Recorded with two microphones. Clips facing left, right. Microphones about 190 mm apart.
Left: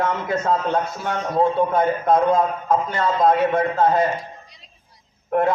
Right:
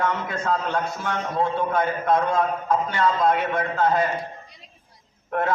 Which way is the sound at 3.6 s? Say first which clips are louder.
Left 4 dB; 25° left (ahead or behind).